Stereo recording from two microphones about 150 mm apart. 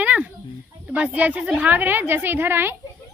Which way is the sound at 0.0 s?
10° right (ahead or behind).